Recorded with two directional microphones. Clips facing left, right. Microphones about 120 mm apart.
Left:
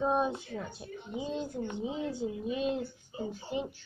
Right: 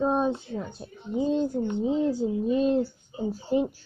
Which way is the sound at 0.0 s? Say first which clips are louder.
Right 5 dB; 30° right (ahead or behind).